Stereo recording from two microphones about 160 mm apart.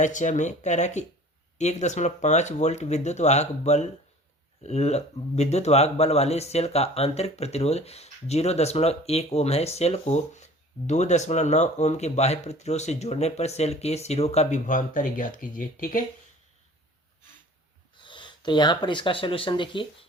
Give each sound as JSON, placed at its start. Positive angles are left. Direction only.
{"t": 0.0, "sound": "speech", "side_deg": 50}
{"t": 18.0, "sound": "speech", "side_deg": 30}